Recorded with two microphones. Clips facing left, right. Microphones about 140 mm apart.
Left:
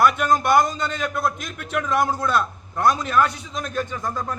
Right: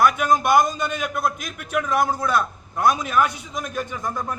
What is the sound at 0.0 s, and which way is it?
A man's voice, 10° right (ahead or behind).